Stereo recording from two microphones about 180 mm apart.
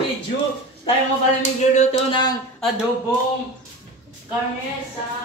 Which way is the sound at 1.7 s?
35° left (ahead or behind).